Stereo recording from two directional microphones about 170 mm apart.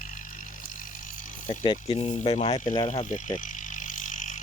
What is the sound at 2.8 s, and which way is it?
Vehicle, 45° left (ahead or behind).